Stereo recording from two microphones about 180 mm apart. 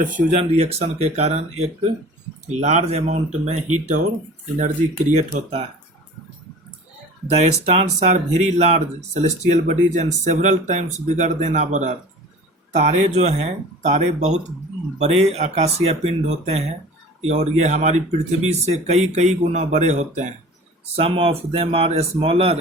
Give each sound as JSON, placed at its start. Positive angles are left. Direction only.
{"t": 0.0, "sound": "speech", "side_deg": -45}
{"t": 7.3, "sound": "speech", "side_deg": -35}